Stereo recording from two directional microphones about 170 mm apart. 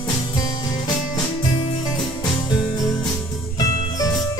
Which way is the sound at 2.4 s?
20° left (ahead or behind).